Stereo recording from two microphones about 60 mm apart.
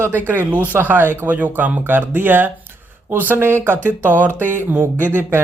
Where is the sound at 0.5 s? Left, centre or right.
Right.